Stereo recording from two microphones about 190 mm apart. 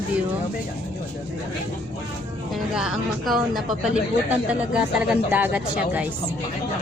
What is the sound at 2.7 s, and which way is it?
Speech, 5° right (ahead or behind).